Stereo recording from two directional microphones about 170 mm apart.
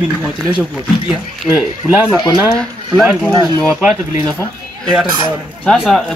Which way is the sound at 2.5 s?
5° left (ahead or behind).